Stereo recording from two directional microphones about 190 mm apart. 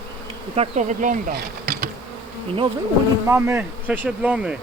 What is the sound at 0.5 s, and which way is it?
Bee, 35° right (ahead or behind).